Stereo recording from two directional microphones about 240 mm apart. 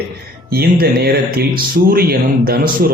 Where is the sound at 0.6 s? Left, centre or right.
Right.